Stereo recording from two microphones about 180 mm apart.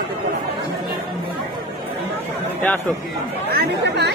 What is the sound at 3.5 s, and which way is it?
Chatter, 65° right (ahead or behind).